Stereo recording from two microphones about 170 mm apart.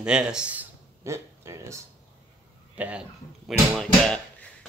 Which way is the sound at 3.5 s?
5° left (ahead or behind).